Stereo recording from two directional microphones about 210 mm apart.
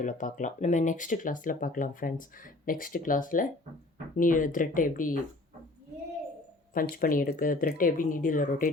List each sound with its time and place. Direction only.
0.0 s speech: 35° left (ahead or behind)
6.7 s speech: 45° left (ahead or behind)